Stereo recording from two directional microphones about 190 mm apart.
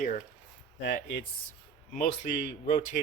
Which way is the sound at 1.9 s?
40° left (ahead or behind).